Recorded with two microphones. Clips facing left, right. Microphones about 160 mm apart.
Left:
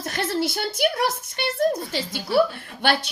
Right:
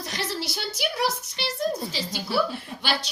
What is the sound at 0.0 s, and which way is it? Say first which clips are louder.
A woman's voice: left 6 dB; 50° left (ahead or behind).